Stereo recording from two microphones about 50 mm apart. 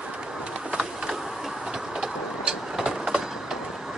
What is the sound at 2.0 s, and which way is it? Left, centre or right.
Vehicle, centre.